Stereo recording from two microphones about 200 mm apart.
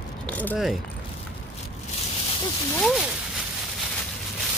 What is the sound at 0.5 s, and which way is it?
Speech, centre (ahead or behind).